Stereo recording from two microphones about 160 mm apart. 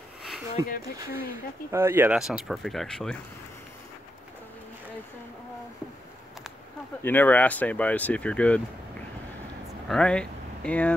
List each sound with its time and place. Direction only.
0.7 s speech: 70° left (ahead or behind)
1.7 s speech: 15° right (ahead or behind)
2.1 s speech: 5° right (ahead or behind)
7.0 s speech: 10° left (ahead or behind)
9.8 s speech: 5° left (ahead or behind)